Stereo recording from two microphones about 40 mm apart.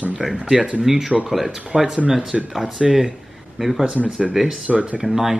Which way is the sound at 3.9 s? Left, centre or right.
Right.